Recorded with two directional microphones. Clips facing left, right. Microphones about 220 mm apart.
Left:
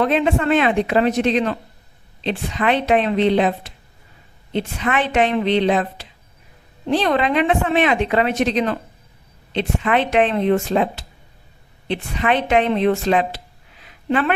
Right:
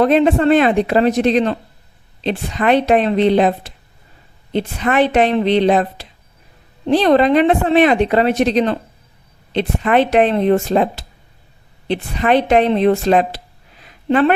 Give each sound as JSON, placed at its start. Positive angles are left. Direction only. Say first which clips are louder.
{"t": 0.0, "sound": "a woman's voice", "louder": "right 5 dB", "side_deg": -35}